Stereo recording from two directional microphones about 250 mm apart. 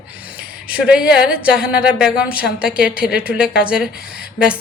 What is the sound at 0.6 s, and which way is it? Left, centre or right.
A woman's voice, centre.